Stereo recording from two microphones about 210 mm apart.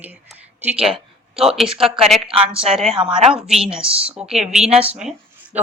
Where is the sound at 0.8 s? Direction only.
25° right (ahead or behind).